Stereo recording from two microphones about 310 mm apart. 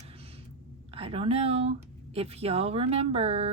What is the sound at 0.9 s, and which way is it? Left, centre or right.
Speech, centre.